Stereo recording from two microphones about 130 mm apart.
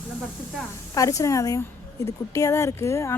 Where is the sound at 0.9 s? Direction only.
25° left (ahead or behind).